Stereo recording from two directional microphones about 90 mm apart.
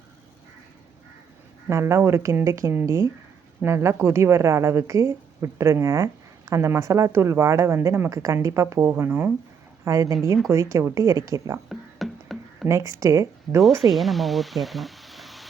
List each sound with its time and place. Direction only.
1.7 s a woman's voice: 30° right (ahead or behind)
8.1 s a woman's voice: 40° right (ahead or behind)
9.8 s a woman's voice: 35° right (ahead or behind)
11.7 s music: centre (ahead or behind)
12.6 s a woman's voice: 35° right (ahead or behind)
13.9 s speech: centre (ahead or behind)